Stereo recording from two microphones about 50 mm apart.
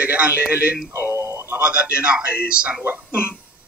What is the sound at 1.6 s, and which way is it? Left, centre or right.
Speech, right.